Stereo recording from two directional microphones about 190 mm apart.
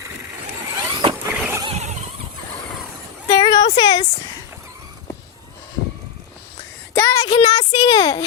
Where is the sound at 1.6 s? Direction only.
35° right (ahead or behind).